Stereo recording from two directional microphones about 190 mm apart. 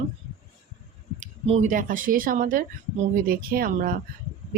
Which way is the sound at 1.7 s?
45° right (ahead or behind).